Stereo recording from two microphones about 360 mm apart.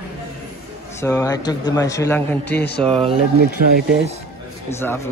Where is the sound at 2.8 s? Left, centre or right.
Centre.